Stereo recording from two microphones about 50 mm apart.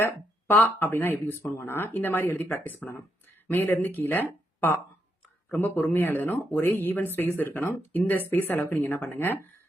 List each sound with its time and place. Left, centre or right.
0.0 s speech: left
2.8 s speech: centre
3.5 s speech: left